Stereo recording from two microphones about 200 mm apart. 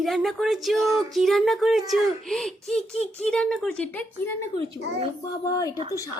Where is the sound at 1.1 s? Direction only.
Centre (ahead or behind).